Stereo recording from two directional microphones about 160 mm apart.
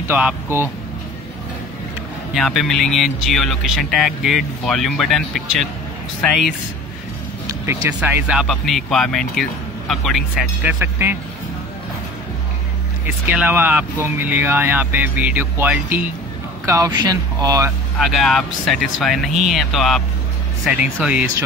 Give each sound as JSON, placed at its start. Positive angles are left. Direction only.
{"t": 0.1, "sound": "speech", "side_deg": -10}
{"t": 2.3, "sound": "speech", "side_deg": 0}
{"t": 7.6, "sound": "speech", "side_deg": -10}
{"t": 10.6, "sound": "speech", "side_deg": -10}
{"t": 13.0, "sound": "speech", "side_deg": -10}
{"t": 17.9, "sound": "speech", "side_deg": 0}